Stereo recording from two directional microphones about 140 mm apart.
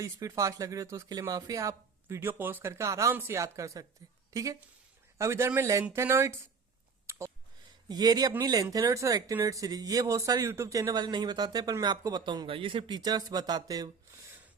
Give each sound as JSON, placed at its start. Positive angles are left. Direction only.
{"t": 0.0, "sound": "a woman's voice", "side_deg": -25}
{"t": 7.1, "sound": "a sound", "side_deg": -20}
{"t": 7.9, "sound": "speech", "side_deg": -30}